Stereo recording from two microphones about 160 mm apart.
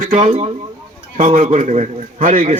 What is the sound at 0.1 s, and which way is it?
A man's voice, 40° right (ahead or behind).